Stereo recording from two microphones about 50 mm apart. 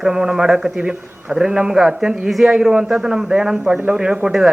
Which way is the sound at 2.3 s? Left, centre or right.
Centre.